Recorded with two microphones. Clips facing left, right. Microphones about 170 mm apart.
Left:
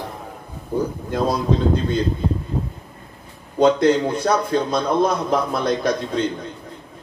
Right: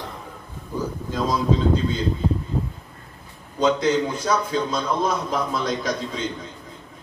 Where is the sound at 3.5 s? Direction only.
55° left (ahead or behind).